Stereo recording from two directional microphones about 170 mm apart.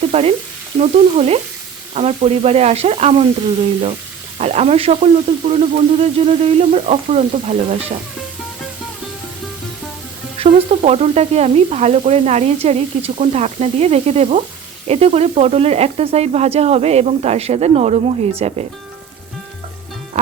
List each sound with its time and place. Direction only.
0.1 s frying: 40° right (ahead or behind)
4.4 s frying: 40° right (ahead or behind)
10.3 s frying: 35° right (ahead or behind)